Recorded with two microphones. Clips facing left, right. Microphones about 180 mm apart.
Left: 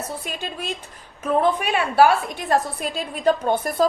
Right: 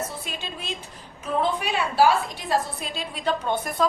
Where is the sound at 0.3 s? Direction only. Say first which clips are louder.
Left 4 dB; 50° left (ahead or behind).